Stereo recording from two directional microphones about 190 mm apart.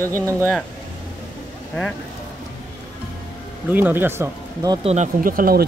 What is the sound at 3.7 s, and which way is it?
Speech, 10° right (ahead or behind).